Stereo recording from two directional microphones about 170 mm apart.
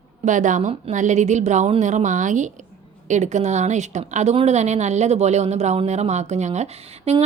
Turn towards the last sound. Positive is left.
turn(degrees=-40)  # may be behind; listen again after turning